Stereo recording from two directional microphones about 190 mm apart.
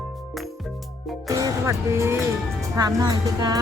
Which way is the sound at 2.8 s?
20° right (ahead or behind).